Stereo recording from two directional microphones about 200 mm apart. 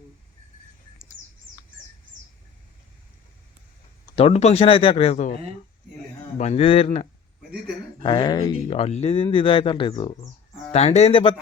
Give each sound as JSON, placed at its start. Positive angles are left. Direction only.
{"t": 4.1, "sound": "a man's voice", "side_deg": 30}